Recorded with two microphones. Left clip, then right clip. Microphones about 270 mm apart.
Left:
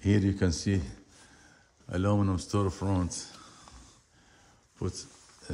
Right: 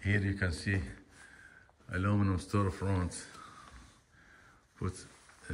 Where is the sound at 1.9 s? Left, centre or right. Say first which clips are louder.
Left 5 dB; centre.